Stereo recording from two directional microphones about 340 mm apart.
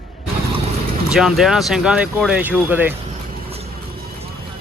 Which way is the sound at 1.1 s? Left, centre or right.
Centre.